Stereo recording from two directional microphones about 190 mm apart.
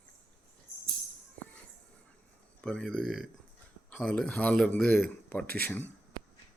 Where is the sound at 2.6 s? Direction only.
5° left (ahead or behind).